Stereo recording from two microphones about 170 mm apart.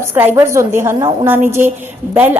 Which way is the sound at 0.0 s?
15° right (ahead or behind).